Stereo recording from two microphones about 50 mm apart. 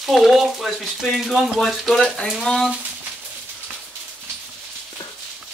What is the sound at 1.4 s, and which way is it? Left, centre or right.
Speech, centre.